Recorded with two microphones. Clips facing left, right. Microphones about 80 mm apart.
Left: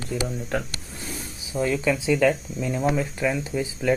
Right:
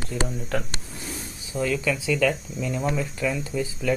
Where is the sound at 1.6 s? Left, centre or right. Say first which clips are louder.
Left 2 dB; left.